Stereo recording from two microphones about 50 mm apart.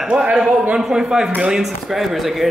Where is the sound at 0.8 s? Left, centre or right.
Centre.